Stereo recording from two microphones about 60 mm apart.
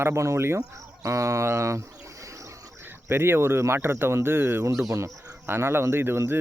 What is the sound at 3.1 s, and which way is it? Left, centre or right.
Speech, right.